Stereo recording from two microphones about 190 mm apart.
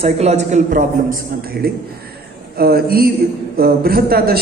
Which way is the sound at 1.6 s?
55° right (ahead or behind).